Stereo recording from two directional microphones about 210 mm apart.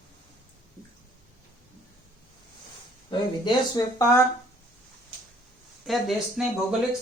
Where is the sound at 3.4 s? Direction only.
20° left (ahead or behind).